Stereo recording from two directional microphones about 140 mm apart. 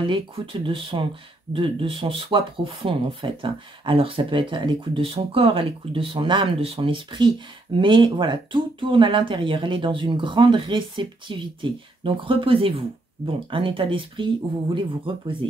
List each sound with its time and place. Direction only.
0.0 s speech: 35° right (ahead or behind)